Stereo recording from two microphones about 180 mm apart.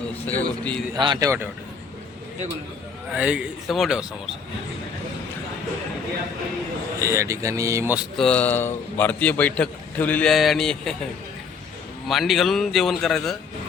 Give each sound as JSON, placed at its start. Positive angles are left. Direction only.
{"t": 0.3, "sound": "a man's voice", "side_deg": 10}
{"t": 0.9, "sound": "speech", "side_deg": -25}
{"t": 3.2, "sound": "a man's voice", "side_deg": -5}
{"t": 7.0, "sound": "speech", "side_deg": -15}
{"t": 8.1, "sound": "a man's voice", "side_deg": 5}
{"t": 12.0, "sound": "a man's voice", "side_deg": 0}